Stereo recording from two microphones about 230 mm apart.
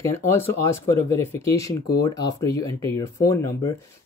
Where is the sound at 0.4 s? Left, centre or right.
Centre.